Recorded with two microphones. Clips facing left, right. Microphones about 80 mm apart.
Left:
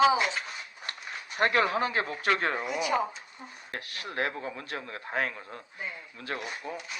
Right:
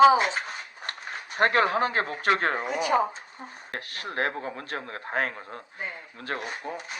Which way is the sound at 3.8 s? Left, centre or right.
Right.